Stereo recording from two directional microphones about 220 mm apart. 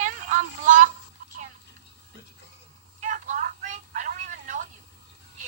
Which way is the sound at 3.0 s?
35° right (ahead or behind).